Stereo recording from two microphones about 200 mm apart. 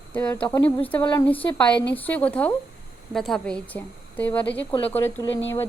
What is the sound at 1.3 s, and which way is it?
A woman's voice, 10° left (ahead or behind).